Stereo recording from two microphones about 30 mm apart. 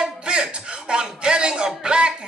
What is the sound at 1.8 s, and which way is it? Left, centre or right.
Music, right.